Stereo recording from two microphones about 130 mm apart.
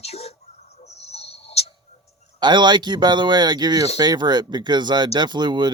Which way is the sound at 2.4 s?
35° right (ahead or behind).